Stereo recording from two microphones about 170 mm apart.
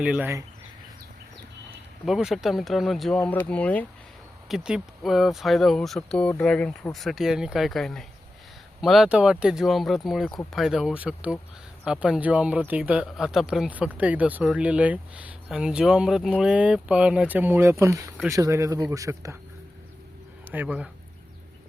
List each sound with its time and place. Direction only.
0.0 s speech: 10° right (ahead or behind)
2.0 s speech: centre (ahead or behind)
4.4 s speech: 5° right (ahead or behind); by 19.4 s 20° right (ahead or behind)
20.5 s speech: 10° right (ahead or behind)